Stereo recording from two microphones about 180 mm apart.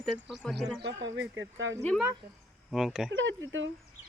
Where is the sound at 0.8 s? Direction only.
75° right (ahead or behind); by 1.7 s 90° right.